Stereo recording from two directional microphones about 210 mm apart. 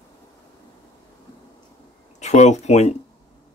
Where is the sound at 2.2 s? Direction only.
35° left (ahead or behind).